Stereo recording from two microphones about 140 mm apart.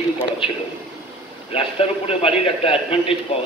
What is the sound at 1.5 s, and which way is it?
A man's voice, 45° left (ahead or behind).